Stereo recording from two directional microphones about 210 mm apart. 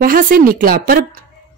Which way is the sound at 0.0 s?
45° right (ahead or behind).